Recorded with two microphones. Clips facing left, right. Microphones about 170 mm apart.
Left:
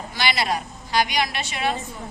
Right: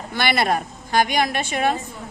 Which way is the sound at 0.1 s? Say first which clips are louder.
Right 4 dB; 55° right (ahead or behind).